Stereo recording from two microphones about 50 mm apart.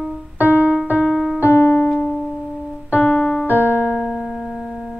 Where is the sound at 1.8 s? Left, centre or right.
Left.